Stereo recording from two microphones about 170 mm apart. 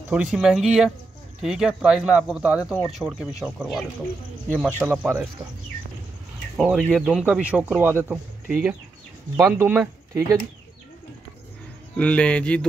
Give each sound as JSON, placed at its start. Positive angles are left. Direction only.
{"t": 0.1, "sound": "speech", "side_deg": -5}
{"t": 6.5, "sound": "speech", "side_deg": -5}
{"t": 7.1, "sound": "speech", "side_deg": -5}
{"t": 9.4, "sound": "speech", "side_deg": -15}
{"t": 12.0, "sound": "speech", "side_deg": 5}